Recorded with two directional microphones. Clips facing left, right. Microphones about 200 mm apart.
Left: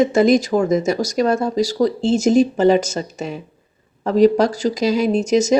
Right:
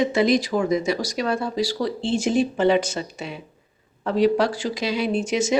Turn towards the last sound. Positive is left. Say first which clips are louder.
# left 6 dB
turn(degrees=40)  # may be behind; listen again after turning